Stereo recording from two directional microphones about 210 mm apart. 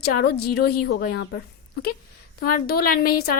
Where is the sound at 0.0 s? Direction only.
50° left (ahead or behind).